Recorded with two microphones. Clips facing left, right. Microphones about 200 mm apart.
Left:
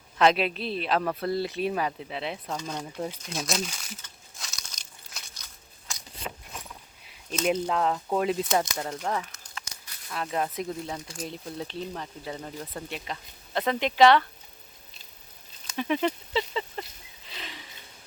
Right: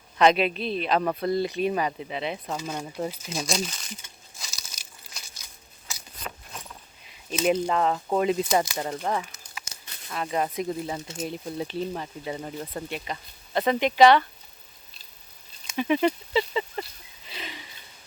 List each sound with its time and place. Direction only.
0.2 s speech: centre (ahead or behind)
4.4 s crumpling: 5° right (ahead or behind)
5.9 s a sound: 5° right (ahead or behind)
6.5 s keys jangling: centre (ahead or behind)
7.3 s speech: 5° right (ahead or behind)
9.6 s a sound: 25° right (ahead or behind)
10.1 s speech: centre (ahead or behind)
11.0 s speech: 25° right (ahead or behind)
11.3 s speech: 5° right (ahead or behind)
15.6 s speech: 5° right (ahead or behind)
17.2 s a sound: 5° right (ahead or behind)